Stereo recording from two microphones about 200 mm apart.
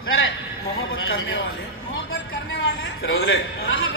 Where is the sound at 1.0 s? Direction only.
75° left (ahead or behind).